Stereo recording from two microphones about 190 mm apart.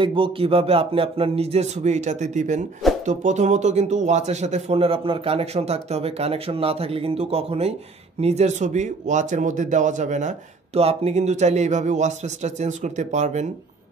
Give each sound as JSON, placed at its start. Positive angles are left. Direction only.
{"t": 0.0, "sound": "speech", "side_deg": -25}